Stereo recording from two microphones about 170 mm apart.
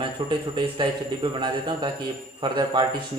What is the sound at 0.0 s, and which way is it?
A man's voice, 30° right (ahead or behind).